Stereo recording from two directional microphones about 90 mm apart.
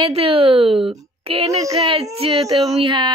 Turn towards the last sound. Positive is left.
turn(degrees=-60)  # may be behind; listen again after turning